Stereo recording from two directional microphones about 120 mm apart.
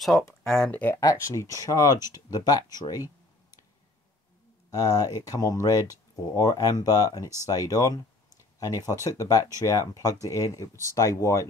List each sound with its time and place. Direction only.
0.7 s speech: 15° left (ahead or behind)
0.9 s speech: 25° left (ahead or behind)
4.6 s speech: 30° left (ahead or behind)